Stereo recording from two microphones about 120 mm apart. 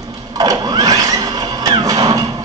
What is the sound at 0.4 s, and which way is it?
Music, 30° right (ahead or behind).